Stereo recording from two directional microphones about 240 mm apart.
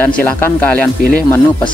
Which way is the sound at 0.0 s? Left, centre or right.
Centre.